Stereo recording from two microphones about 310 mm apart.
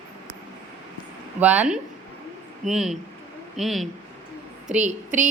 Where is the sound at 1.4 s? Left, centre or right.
Centre.